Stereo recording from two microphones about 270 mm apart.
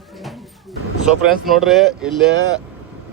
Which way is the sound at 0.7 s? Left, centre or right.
Centre.